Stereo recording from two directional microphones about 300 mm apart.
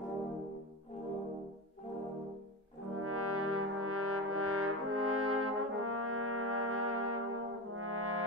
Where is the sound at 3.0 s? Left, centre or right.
Right.